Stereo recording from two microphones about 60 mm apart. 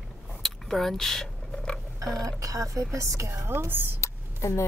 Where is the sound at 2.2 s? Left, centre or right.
Right.